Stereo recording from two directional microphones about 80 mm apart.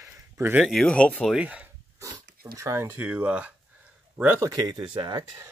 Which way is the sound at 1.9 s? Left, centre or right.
Right.